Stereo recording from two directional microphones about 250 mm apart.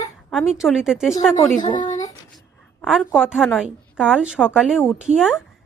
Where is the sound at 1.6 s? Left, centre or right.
Centre.